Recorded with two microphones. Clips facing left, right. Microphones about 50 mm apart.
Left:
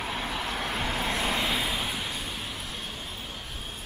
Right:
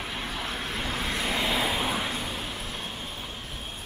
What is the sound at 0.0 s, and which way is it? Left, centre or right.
Vehicle, centre.